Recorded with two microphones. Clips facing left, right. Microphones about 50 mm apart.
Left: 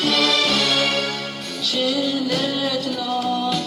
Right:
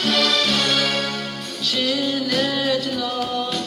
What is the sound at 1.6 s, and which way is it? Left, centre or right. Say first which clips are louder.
Music: left 1 dB; right.